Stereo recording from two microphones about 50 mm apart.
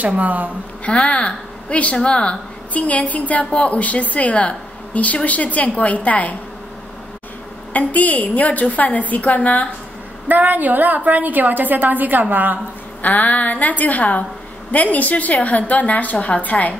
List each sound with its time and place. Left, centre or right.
0.2 s a woman's voice: right
0.8 s a woman's voice: left
7.7 s a woman's voice: left
10.2 s a woman's voice: right
13.0 s a woman's voice: left